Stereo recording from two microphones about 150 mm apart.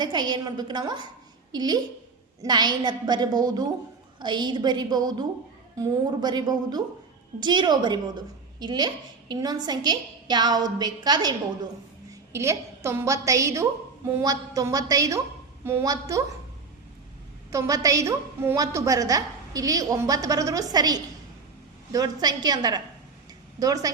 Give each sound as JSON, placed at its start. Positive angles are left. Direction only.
{"t": 0.0, "sound": "a woman's voice", "side_deg": -30}
{"t": 17.5, "sound": "a woman's voice", "side_deg": -20}